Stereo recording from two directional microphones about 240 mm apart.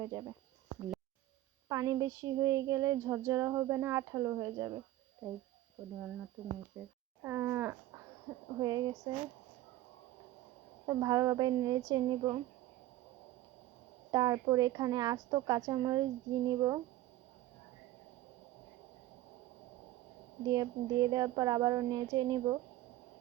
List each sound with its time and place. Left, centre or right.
0.0 s child singing: centre
1.7 s child singing: centre
6.8 s speech: centre
8.5 s child singing: centre
10.8 s child singing: centre
14.1 s child singing: centre
20.4 s child singing: centre